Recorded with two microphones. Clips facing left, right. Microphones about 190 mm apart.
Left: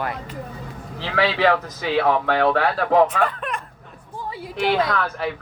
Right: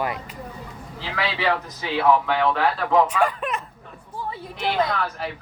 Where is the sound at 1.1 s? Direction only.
60° left (ahead or behind).